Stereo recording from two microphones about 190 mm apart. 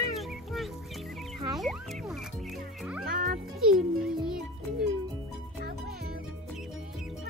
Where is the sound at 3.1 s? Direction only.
45° right (ahead or behind).